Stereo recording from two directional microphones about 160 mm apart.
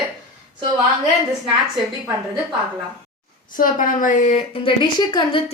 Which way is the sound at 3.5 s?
55° left (ahead or behind).